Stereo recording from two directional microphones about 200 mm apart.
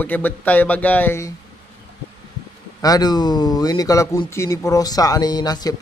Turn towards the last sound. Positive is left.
turn(degrees=20)  # may be behind; listen again after turning